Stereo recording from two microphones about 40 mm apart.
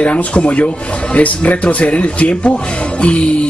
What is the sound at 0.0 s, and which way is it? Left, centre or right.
Speech, left.